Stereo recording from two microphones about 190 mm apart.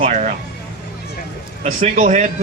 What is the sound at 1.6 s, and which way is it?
Speech, 40° right (ahead or behind).